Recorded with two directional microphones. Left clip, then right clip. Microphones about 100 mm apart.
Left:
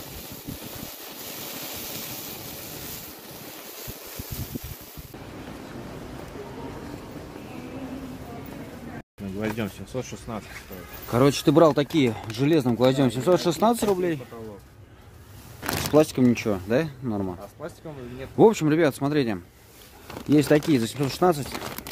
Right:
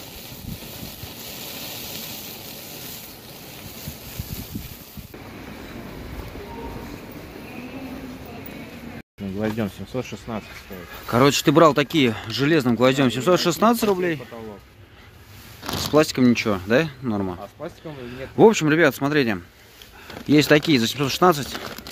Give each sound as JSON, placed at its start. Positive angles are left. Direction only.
{"t": 1.4, "sound": "a sound", "side_deg": 5}
{"t": 9.4, "sound": "speech", "side_deg": -90}
{"t": 11.1, "sound": "speech", "side_deg": 0}
{"t": 15.9, "sound": "speech", "side_deg": 5}
{"t": 18.4, "sound": "speech", "side_deg": 10}